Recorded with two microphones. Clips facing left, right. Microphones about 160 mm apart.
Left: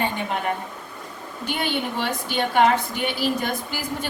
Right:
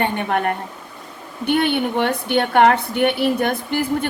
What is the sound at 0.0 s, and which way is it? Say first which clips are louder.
A woman's voice: right 5 dB; 60° right (ahead or behind).